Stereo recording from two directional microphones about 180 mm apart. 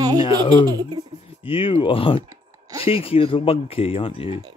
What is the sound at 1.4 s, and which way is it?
Speech, 30° left (ahead or behind).